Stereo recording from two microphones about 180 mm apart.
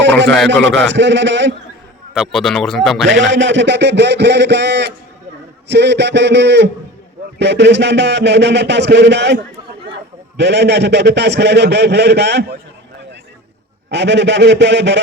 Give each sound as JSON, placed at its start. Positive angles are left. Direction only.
{"t": 0.3, "sound": "speech", "side_deg": 0}
{"t": 0.9, "sound": "a man's voice", "side_deg": -80}
{"t": 2.1, "sound": "speech", "side_deg": 0}
{"t": 3.1, "sound": "a man's voice", "side_deg": -90}
{"t": 13.9, "sound": "a man's voice", "side_deg": -75}